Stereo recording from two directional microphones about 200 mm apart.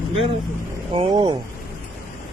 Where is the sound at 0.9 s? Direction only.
25° right (ahead or behind).